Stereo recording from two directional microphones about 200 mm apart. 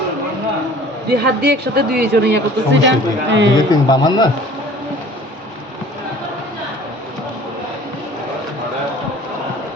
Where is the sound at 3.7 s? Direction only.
20° left (ahead or behind).